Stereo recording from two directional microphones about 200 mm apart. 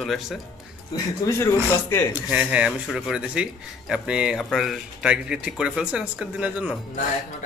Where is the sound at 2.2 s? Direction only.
5° right (ahead or behind).